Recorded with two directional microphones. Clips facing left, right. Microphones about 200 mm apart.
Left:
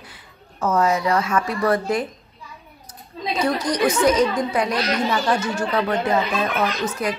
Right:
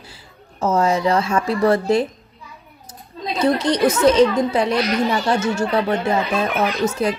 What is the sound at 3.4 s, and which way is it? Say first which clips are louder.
A child's voice: right 4 dB; 25° right (ahead or behind).